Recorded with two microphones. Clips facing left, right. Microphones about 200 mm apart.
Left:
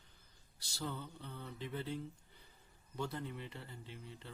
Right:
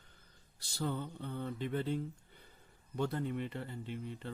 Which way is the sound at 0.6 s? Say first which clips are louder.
Right 6 dB; 55° right (ahead or behind).